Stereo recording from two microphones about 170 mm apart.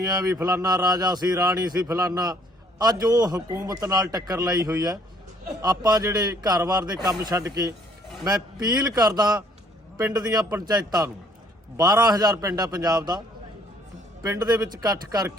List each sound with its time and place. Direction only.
0.0 s a man's voice: 20° right (ahead or behind)